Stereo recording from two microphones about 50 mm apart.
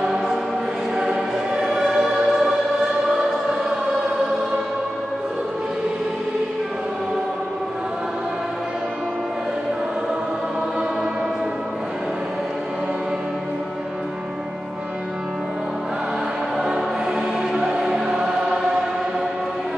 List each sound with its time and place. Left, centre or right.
0.0 s choir: centre
16.5 s music: centre